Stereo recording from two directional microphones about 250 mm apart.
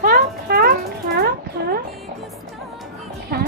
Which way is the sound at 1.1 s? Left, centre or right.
Right.